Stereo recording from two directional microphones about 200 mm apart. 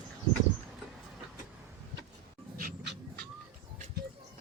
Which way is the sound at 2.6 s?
45° right (ahead or behind).